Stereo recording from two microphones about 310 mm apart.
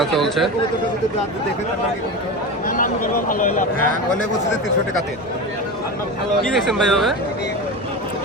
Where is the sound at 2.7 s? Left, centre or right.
Left.